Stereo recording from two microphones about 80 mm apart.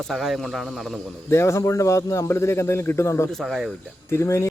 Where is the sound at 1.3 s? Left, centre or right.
Left.